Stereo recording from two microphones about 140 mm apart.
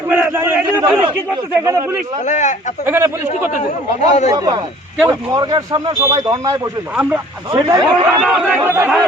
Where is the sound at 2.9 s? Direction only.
15° right (ahead or behind).